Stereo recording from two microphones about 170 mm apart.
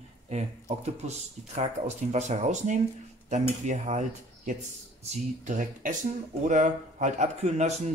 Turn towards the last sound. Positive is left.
turn(degrees=-40)  # may be behind; listen again after turning